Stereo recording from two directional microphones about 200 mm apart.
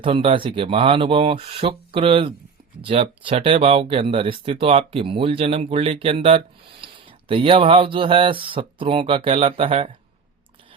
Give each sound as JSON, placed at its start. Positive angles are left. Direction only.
{"t": 0.0, "sound": "speech", "side_deg": -25}